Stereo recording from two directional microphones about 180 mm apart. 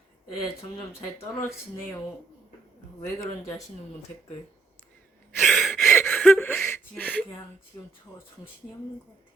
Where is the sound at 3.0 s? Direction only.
20° left (ahead or behind).